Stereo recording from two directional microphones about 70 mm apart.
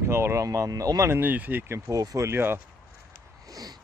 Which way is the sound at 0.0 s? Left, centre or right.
Right.